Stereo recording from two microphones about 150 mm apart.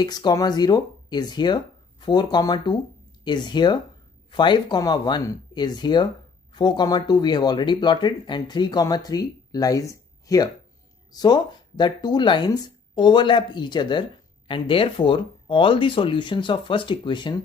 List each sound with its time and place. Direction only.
0.0 s speech: 30° left (ahead or behind)